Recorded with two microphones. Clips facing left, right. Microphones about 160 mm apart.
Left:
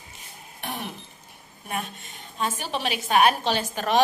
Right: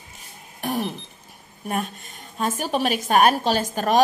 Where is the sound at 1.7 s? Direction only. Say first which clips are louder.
Right 5 dB; 45° right (ahead or behind).